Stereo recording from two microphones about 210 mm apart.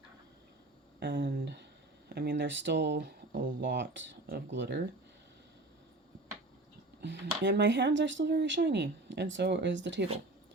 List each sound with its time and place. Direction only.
0.9 s speech: 50° right (ahead or behind)
7.0 s speech: 55° right (ahead or behind)